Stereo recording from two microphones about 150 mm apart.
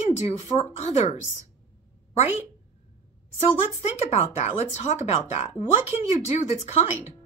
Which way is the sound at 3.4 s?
45° left (ahead or behind).